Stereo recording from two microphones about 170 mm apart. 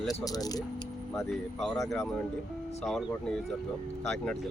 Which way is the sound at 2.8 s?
Centre (ahead or behind).